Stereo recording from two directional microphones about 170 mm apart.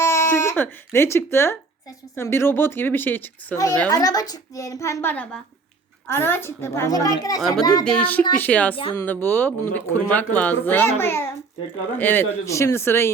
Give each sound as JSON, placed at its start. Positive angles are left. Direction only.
{"t": 0.0, "sound": "a sound", "side_deg": 15}
{"t": 0.9, "sound": "a woman's voice", "side_deg": 15}
{"t": 7.9, "sound": "speech", "side_deg": 10}
{"t": 8.7, "sound": "speech", "side_deg": 30}
{"t": 9.0, "sound": "speech", "side_deg": 10}